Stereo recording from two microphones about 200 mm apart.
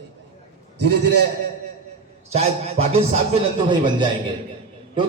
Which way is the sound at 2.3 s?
30° right (ahead or behind).